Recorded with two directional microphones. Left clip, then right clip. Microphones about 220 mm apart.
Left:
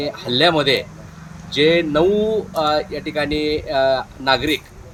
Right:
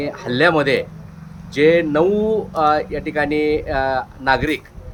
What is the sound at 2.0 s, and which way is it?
Speech, 25° right (ahead or behind).